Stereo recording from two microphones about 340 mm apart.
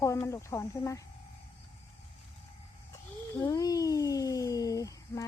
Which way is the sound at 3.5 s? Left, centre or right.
Centre.